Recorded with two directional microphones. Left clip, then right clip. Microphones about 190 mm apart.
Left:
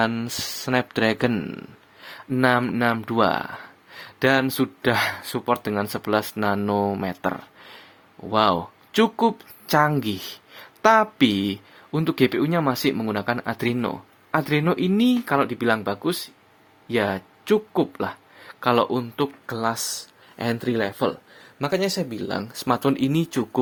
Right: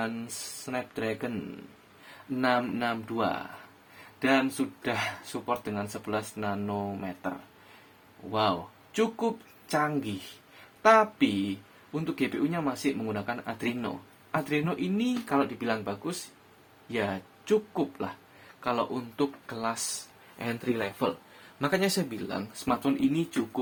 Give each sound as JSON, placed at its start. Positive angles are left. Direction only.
{"t": 0.0, "sound": "speech", "side_deg": 45}
{"t": 2.4, "sound": "speech", "side_deg": 50}
{"t": 15.4, "sound": "speech", "side_deg": 35}
{"t": 21.6, "sound": "speech", "side_deg": 20}
{"t": 22.1, "sound": "speech", "side_deg": 45}